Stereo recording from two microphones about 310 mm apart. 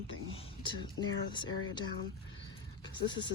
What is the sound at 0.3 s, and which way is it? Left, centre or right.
Speech, centre.